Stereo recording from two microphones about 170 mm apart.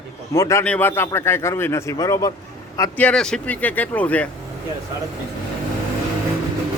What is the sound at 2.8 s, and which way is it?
Speech, 10° left (ahead or behind).